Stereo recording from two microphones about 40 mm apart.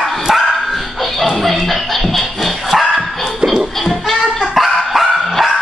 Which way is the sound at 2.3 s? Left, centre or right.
Centre.